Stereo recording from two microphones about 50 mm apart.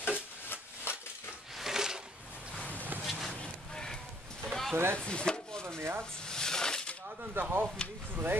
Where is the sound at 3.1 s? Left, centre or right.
Centre.